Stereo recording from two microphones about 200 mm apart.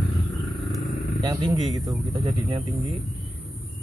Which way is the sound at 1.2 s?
20° right (ahead or behind).